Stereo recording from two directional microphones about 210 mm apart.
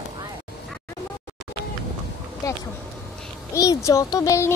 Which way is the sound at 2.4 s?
15° left (ahead or behind).